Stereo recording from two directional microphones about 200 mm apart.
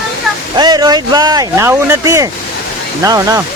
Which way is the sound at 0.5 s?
20° right (ahead or behind).